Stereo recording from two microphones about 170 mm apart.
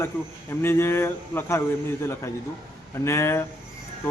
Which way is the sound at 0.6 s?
15° left (ahead or behind).